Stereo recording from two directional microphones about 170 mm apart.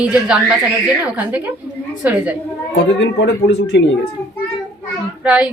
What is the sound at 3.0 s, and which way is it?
Speech, 90° left.